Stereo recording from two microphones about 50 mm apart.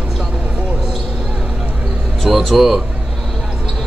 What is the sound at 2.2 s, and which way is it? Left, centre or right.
Speech, centre.